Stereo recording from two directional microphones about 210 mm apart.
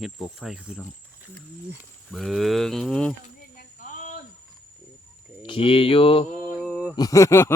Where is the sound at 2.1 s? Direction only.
Centre (ahead or behind).